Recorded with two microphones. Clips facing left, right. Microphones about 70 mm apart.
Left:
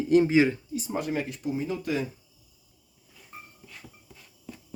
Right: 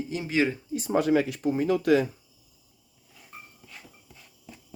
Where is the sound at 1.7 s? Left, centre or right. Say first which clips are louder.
Right 12 dB; right.